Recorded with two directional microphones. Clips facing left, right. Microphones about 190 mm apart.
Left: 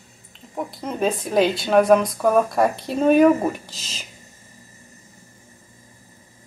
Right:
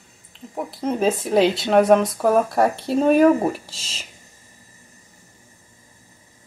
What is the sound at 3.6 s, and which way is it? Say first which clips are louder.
Speech: left 2 dB; 30° right (ahead or behind).